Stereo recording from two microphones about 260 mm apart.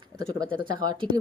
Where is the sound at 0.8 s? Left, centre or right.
Centre.